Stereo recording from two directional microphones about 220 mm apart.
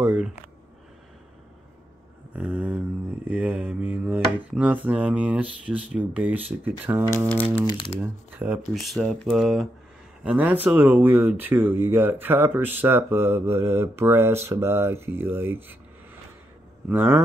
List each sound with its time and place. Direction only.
0.0 s a sound: 5° right (ahead or behind)
2.3 s a sound: 5° right (ahead or behind)
3.3 s speech: 5° right (ahead or behind)
7.2 s speech: 5° left (ahead or behind)
7.4 s speech: 20° left (ahead or behind)
8.0 s speech: 5° right (ahead or behind)
16.9 s speech: 10° right (ahead or behind)